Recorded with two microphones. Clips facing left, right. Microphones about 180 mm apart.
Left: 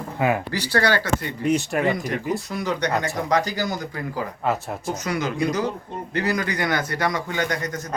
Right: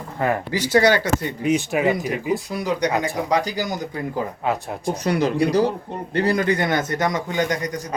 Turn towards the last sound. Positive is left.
turn(degrees=-15)  # may be behind; listen again after turning